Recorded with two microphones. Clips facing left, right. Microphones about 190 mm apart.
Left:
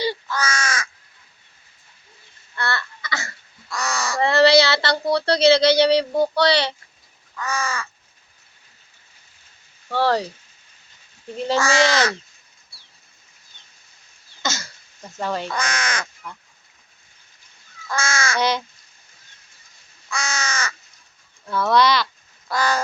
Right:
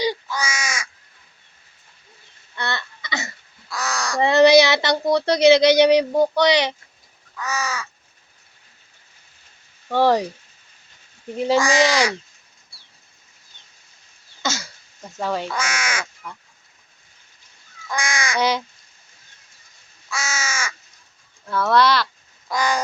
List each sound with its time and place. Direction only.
0.0 s crow: 15° right (ahead or behind)
2.6 s a sound: 20° right (ahead or behind)
3.7 s crow: centre (ahead or behind)
4.2 s speech: 20° right (ahead or behind)
7.3 s crow: 5° right (ahead or behind)
9.9 s speech: 15° right (ahead or behind)
11.3 s speech: 10° right (ahead or behind)
14.4 s throat clearing: 10° right (ahead or behind)
15.2 s speech: 5° right (ahead or behind)
17.8 s crow: 15° right (ahead or behind)
20.1 s crow: 5° right (ahead or behind)
21.4 s speech: 10° left (ahead or behind)
21.7 s crow: 5° right (ahead or behind)
22.4 s crow: 15° right (ahead or behind)